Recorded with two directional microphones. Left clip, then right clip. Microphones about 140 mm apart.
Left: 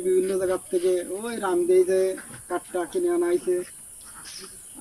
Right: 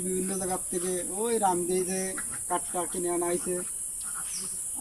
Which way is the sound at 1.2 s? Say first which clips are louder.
Left 3 dB; 20° right (ahead or behind).